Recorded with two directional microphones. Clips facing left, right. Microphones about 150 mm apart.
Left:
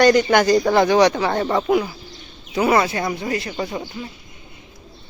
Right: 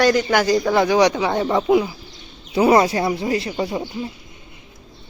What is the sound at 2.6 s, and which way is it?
Speech, 30° right (ahead or behind).